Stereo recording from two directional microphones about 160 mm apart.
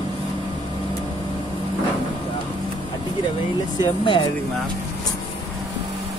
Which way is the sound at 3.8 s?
30° left (ahead or behind).